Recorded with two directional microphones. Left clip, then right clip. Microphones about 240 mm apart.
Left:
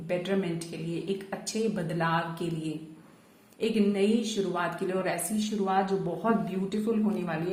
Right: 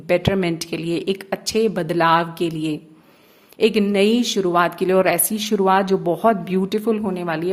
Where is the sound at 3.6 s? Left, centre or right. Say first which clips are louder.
Right 10 dB; right.